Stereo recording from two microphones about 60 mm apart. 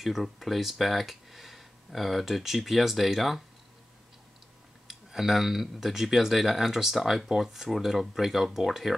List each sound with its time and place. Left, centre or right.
0.0 s speech: centre
4.8 s speech: centre